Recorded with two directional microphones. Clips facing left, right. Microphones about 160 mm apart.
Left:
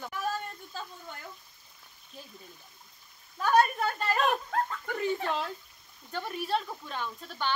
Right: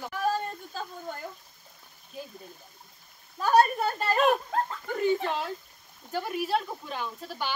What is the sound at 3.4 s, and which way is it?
Speech, 35° right (ahead or behind).